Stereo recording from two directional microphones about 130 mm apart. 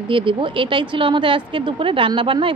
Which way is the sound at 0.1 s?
40° right (ahead or behind).